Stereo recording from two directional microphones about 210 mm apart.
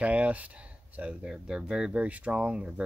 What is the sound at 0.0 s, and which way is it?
Speech, 5° right (ahead or behind).